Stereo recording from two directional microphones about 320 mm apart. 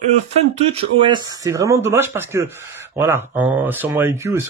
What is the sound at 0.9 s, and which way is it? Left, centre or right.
Speech, centre.